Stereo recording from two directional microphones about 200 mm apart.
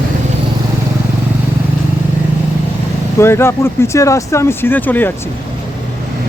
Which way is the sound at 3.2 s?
15° left (ahead or behind).